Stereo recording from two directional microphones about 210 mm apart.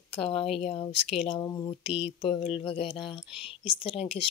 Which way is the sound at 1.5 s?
15° left (ahead or behind).